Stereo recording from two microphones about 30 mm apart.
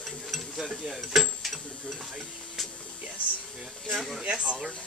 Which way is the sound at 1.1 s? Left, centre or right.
Centre.